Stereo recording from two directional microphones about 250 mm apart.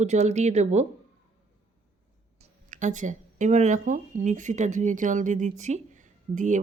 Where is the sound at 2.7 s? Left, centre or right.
Right.